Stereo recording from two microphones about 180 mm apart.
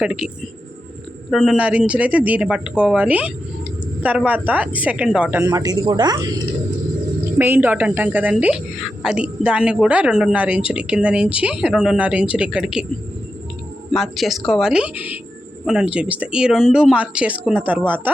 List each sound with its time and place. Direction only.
0.0 s speech: 5° right (ahead or behind)
1.3 s a woman's voice: centre (ahead or behind); by 6.3 s 20° right (ahead or behind)
7.3 s a woman's voice: 10° right (ahead or behind)
13.9 s a woman's voice: centre (ahead or behind)